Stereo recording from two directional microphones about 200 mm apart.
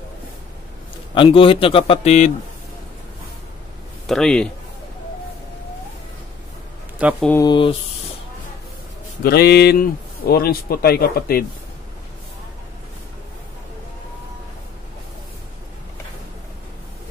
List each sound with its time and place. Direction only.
1.1 s a man's voice: 25° left (ahead or behind)
4.1 s a man's voice: 5° left (ahead or behind)
7.0 s speech: 5° right (ahead or behind)
7.2 s a man's voice: 15° left (ahead or behind)
9.2 s speech: 50° left (ahead or behind)